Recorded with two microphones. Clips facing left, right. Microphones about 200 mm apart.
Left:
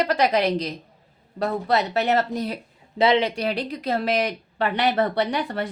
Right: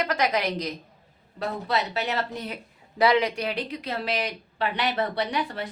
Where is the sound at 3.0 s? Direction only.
25° left (ahead or behind).